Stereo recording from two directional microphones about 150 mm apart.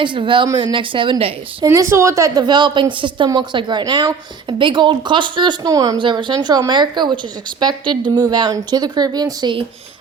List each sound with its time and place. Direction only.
0.0 s a woman's voice: 35° right (ahead or behind)
1.6 s a woman's voice: 20° right (ahead or behind)